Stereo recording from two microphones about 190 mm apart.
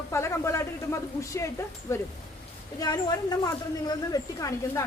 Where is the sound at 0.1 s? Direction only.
15° left (ahead or behind).